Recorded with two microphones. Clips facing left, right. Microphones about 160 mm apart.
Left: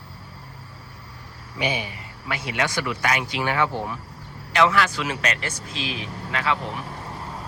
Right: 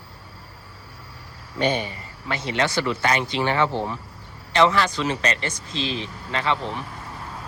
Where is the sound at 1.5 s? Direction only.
10° left (ahead or behind).